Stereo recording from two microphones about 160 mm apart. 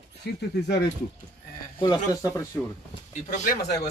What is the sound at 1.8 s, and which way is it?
Speech, 20° left (ahead or behind).